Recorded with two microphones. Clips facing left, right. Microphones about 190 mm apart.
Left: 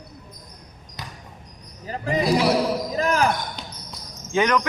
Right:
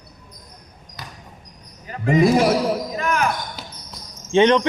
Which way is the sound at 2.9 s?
35° left (ahead or behind).